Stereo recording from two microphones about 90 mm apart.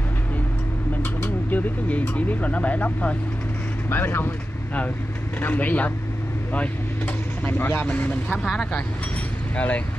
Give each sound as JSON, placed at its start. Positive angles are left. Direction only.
{"t": 1.2, "sound": "speech", "side_deg": 20}
{"t": 5.4, "sound": "speech", "side_deg": 20}